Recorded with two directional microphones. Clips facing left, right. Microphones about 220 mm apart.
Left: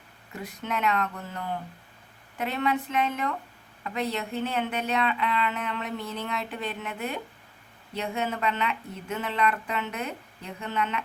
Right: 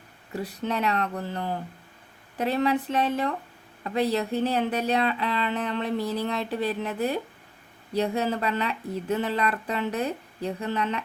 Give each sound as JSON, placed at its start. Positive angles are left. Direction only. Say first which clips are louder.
{"t": 0.3, "sound": "speech", "louder": "right 4 dB", "side_deg": -35}